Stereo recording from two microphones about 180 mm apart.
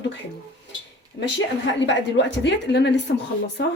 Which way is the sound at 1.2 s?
90° left.